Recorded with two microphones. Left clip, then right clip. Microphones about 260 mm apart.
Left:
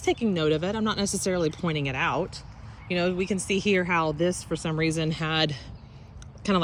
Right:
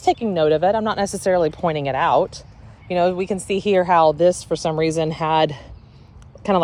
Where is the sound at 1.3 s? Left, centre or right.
Left.